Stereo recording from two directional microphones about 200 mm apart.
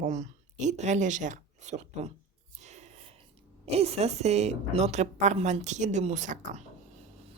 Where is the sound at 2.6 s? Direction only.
35° right (ahead or behind).